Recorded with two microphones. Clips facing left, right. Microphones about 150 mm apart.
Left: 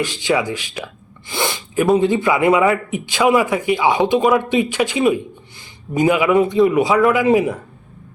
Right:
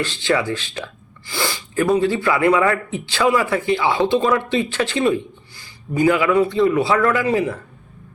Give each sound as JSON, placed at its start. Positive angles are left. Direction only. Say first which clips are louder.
{"t": 0.0, "sound": "speech", "louder": "left 1 dB", "side_deg": 15}
{"t": 1.3, "sound": "sneeze", "louder": "left 2 dB", "side_deg": 20}
{"t": 2.0, "sound": "speech", "louder": "left 2 dB", "side_deg": 20}